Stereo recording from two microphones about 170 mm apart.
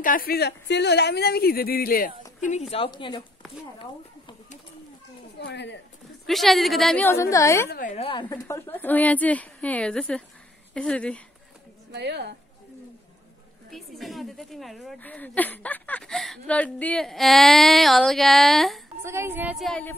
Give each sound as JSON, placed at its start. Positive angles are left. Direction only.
{"t": 0.0, "sound": "speech", "side_deg": 55}
{"t": 2.7, "sound": "a woman's voice", "side_deg": 30}
{"t": 5.4, "sound": "speech", "side_deg": 90}
{"t": 6.2, "sound": "a woman's voice", "side_deg": 0}
{"t": 7.1, "sound": "a woman's voice", "side_deg": 20}
{"t": 7.9, "sound": "a woman's voice", "side_deg": 30}
{"t": 11.9, "sound": "a woman's voice", "side_deg": -80}
{"t": 13.7, "sound": "a woman's voice", "side_deg": 0}
{"t": 19.0, "sound": "speech", "side_deg": -15}
{"t": 19.5, "sound": "a woman's voice", "side_deg": 0}